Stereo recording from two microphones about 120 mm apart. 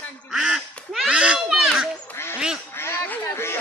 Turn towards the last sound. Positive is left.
turn(degrees=20)  # may be behind; listen again after turning